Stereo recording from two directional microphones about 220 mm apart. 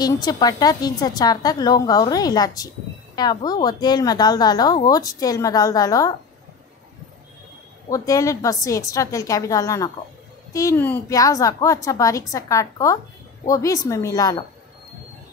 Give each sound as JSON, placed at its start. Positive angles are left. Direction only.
{"t": 0.0, "sound": "a woman's voice", "side_deg": 15}
{"t": 7.9, "sound": "a woman's voice", "side_deg": 15}